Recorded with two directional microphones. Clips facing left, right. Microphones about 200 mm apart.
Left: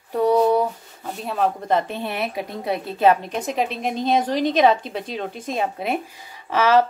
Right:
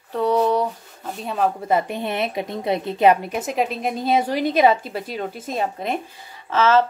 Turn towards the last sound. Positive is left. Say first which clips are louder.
# even
turn(degrees=15)  # may be behind; listen again after turning